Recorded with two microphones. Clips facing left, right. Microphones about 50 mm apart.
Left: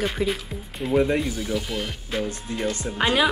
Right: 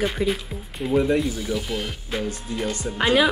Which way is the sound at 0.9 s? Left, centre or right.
Centre.